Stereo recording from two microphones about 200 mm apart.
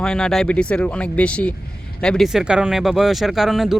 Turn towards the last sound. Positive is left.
turn(degrees=0)  # may be behind; listen again after turning